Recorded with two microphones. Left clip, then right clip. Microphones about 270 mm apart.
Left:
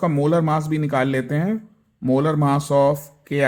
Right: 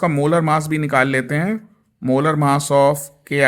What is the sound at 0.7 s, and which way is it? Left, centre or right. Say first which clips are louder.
Speech: right 4 dB; right.